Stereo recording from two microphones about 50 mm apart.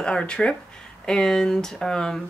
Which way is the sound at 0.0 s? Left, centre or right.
Centre.